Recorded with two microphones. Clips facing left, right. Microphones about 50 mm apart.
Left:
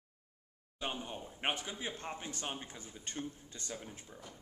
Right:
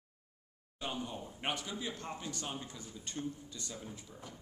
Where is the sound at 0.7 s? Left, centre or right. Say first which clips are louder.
Even; left.